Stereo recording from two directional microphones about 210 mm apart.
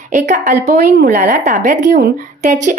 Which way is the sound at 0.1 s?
35° right (ahead or behind).